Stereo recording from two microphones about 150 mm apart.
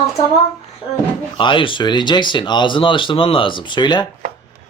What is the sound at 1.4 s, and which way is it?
Speech, 35° left (ahead or behind).